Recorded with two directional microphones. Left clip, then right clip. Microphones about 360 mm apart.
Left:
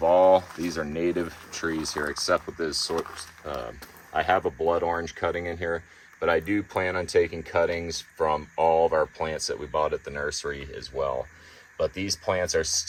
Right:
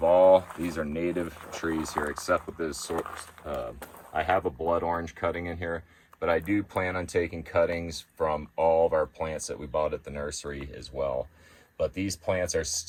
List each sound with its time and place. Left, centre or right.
0.0 s speech: left